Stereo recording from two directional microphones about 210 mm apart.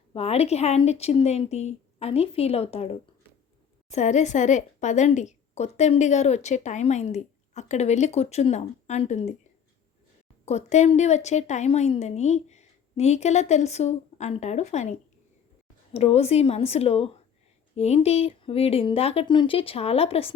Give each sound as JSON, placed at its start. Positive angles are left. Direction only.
{"t": 0.1, "sound": "a woman's voice", "side_deg": 30}
{"t": 10.4, "sound": "a woman's voice", "side_deg": 30}